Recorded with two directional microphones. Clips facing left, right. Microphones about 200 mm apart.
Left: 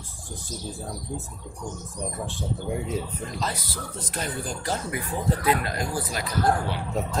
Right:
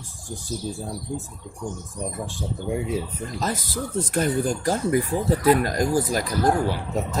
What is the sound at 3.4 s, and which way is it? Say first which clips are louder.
Speech: right 8 dB; 50° right (ahead or behind).